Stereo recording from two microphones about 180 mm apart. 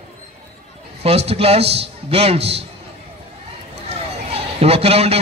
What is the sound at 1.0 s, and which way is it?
A man's voice, 35° right (ahead or behind).